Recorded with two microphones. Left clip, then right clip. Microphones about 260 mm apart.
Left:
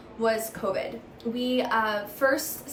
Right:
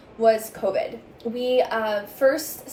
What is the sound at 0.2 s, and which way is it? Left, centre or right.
A woman's voice, centre.